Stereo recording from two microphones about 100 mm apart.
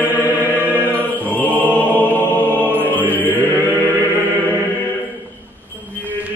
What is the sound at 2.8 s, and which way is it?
Music, 15° left (ahead or behind).